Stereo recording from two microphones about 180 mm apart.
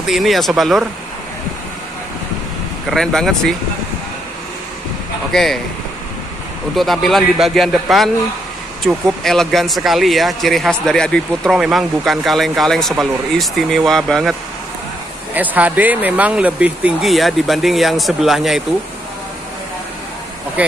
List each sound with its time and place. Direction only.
0.0 s speech: centre (ahead or behind)
2.9 s speech: 5° left (ahead or behind)
5.3 s speech: centre (ahead or behind)
6.7 s speech: centre (ahead or behind)
15.3 s speech: 10° right (ahead or behind)
20.6 s speech: 10° right (ahead or behind)